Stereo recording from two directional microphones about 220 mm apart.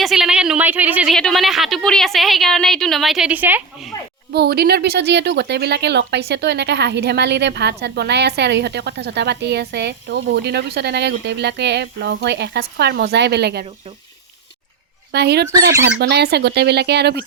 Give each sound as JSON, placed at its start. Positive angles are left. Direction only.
{"t": 0.0, "sound": "speech", "side_deg": 0}
{"t": 4.3, "sound": "speech", "side_deg": -45}
{"t": 15.1, "sound": "speech", "side_deg": -50}